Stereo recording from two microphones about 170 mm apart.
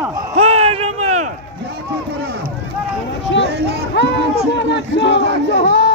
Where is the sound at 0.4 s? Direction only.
35° right (ahead or behind).